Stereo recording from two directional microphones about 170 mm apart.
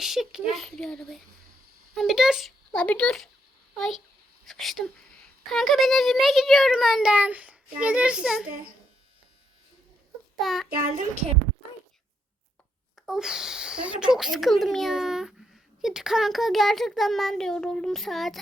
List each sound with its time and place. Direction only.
0.0 s speech: centre (ahead or behind)
10.4 s speech: centre (ahead or behind)
10.8 s a child's voice: 45° right (ahead or behind)
13.0 s speech: 5° right (ahead or behind)